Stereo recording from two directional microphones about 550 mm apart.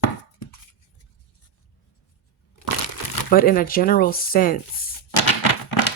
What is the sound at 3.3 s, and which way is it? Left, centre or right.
Speech, centre.